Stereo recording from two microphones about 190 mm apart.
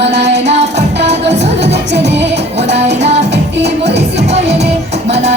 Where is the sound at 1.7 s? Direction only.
65° right (ahead or behind).